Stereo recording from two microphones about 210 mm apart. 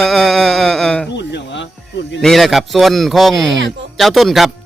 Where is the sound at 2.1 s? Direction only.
Centre (ahead or behind).